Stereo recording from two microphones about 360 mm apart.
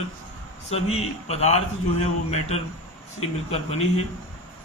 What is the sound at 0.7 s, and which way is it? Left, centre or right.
A man's voice, centre.